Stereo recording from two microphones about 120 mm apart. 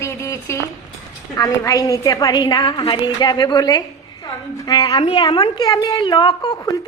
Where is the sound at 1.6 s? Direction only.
25° left (ahead or behind).